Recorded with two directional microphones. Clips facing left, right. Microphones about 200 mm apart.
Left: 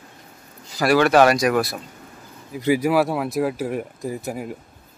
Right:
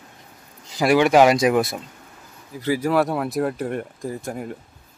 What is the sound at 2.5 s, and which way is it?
Speech, 15° left (ahead or behind).